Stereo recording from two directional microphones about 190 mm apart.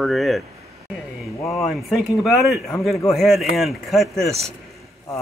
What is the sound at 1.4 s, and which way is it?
Speech, 15° left (ahead or behind).